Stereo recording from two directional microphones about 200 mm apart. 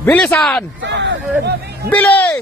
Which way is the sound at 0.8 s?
60° right (ahead or behind).